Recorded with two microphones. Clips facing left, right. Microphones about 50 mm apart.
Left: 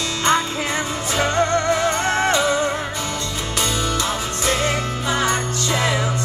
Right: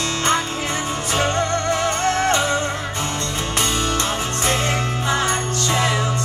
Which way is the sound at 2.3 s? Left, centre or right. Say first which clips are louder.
Left 1 dB; right.